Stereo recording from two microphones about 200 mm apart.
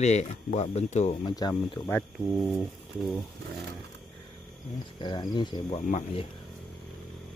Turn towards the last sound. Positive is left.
turn(degrees=30)  # may be behind; listen again after turning